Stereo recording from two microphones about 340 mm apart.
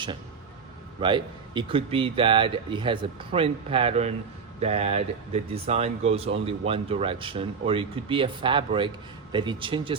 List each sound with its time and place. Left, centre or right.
1.0 s speech: centre